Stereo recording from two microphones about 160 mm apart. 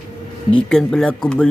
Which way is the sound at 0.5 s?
5° left (ahead or behind).